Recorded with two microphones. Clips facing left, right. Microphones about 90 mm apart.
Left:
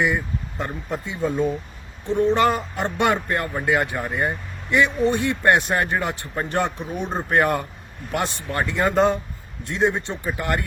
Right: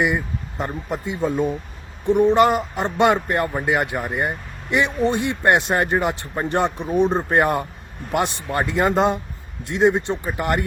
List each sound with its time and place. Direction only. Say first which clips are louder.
0.7 s speech: right 2 dB; 10° right (ahead or behind)